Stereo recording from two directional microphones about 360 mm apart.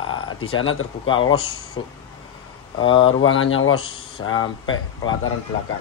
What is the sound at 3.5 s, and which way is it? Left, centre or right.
Speech, left.